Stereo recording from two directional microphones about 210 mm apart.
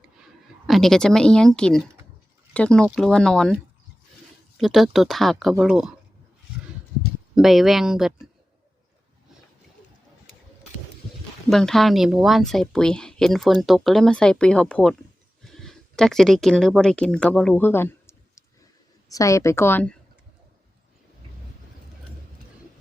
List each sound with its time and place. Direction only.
0.7 s speech: centre (ahead or behind)
4.5 s speech: centre (ahead or behind)
7.3 s speech: centre (ahead or behind)
11.4 s a woman's voice: centre (ahead or behind)